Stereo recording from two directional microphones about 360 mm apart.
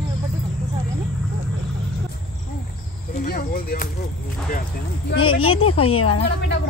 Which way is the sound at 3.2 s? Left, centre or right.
Left.